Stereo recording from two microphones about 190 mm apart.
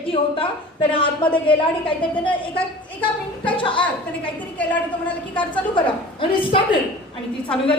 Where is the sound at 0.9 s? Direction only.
25° left (ahead or behind).